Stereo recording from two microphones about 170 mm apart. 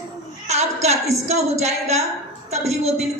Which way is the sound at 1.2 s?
40° right (ahead or behind).